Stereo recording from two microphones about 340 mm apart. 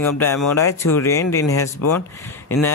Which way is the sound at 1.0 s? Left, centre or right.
Centre.